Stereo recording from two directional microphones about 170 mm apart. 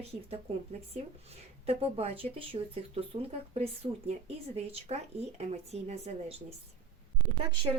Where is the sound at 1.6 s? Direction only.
35° right (ahead or behind).